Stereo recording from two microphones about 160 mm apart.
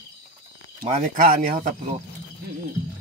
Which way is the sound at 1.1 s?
60° right (ahead or behind).